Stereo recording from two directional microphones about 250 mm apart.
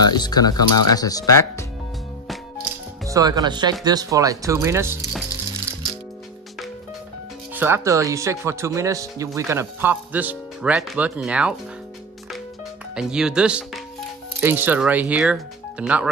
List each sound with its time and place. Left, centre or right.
0.0 s speech: centre
3.1 s speech: centre
7.5 s speech: centre
12.9 s speech: centre